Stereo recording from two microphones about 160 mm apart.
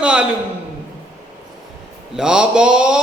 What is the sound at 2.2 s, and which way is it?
Speech, 5° right (ahead or behind).